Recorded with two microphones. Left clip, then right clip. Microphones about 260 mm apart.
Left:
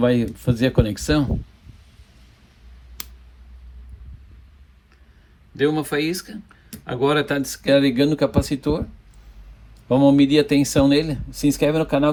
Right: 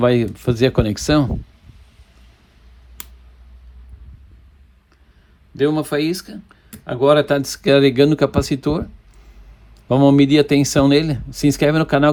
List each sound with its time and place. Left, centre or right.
0.0 s speech: right
5.5 s speech: centre; by 8.8 s right
9.9 s speech: right